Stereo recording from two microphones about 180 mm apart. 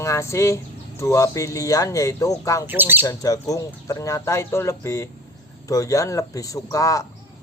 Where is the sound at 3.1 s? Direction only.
20° left (ahead or behind).